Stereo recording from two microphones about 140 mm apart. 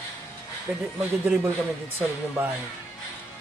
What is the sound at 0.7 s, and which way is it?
Speech, 5° right (ahead or behind).